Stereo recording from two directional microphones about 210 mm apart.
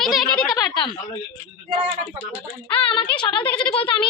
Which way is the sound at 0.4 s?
20° left (ahead or behind).